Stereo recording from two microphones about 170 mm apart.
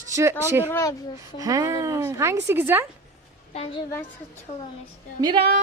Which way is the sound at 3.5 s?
35° left (ahead or behind).